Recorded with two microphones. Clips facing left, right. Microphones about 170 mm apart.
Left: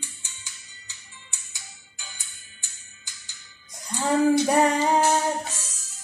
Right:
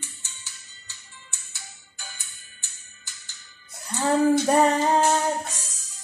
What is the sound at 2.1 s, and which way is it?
Music, 15° left (ahead or behind).